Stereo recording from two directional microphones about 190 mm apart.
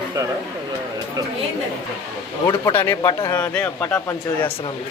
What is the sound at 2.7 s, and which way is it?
Speech, 15° left (ahead or behind).